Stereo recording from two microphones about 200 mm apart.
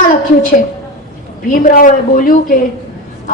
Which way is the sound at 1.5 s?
45° left (ahead or behind).